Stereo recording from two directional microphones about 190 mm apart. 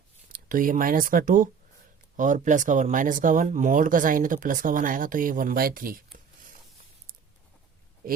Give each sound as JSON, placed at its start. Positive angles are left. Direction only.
{"t": 0.3, "sound": "speech", "side_deg": -45}